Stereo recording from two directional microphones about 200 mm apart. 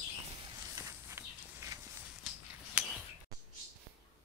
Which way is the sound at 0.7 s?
15° right (ahead or behind).